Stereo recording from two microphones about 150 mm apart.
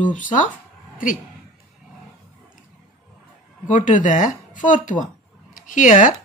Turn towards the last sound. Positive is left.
turn(degrees=60)  # may be behind; listen again after turning